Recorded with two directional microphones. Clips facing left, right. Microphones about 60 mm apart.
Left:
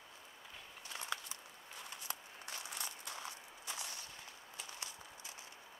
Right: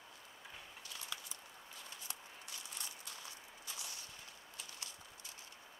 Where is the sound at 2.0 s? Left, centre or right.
Left.